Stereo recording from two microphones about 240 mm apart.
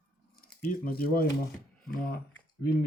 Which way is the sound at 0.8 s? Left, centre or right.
Left.